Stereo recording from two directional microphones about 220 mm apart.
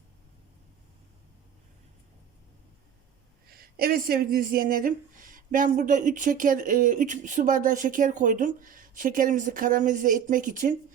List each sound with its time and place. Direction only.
3.4 s speech: 45° right (ahead or behind)